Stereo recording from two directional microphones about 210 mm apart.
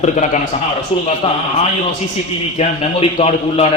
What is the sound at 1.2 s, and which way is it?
Speech, 25° left (ahead or behind).